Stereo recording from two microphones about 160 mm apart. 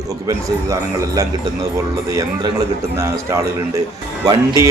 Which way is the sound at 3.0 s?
20° right (ahead or behind).